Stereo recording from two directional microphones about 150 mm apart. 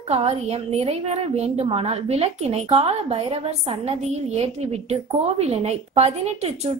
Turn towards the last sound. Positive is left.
turn(degrees=-45)  # may be behind; listen again after turning